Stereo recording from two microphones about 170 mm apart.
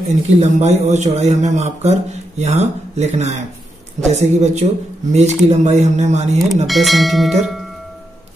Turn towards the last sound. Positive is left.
turn(degrees=0)  # may be behind; listen again after turning